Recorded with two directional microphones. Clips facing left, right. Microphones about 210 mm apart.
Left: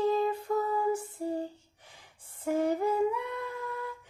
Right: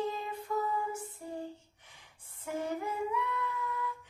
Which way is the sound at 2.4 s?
35° left (ahead or behind).